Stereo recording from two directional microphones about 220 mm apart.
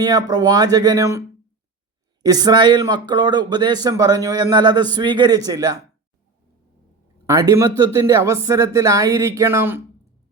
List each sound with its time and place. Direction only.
0.0 s speech: 20° right (ahead or behind)
2.2 s speech: 15° right (ahead or behind)
7.3 s speech: 15° right (ahead or behind)